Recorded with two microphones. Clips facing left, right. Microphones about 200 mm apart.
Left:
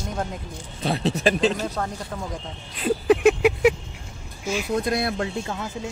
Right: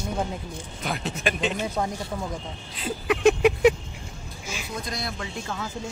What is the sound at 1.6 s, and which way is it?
Speech, 10° right (ahead or behind).